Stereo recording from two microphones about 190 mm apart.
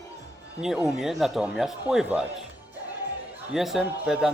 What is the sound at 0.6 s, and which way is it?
A man's voice, 5° right (ahead or behind).